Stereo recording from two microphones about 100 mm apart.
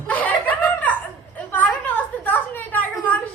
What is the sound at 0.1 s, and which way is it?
Chuckle, 15° left (ahead or behind).